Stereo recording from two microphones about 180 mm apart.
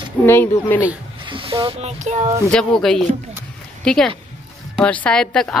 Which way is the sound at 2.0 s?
40° right (ahead or behind).